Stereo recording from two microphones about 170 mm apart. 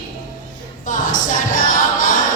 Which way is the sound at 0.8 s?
50° left (ahead or behind).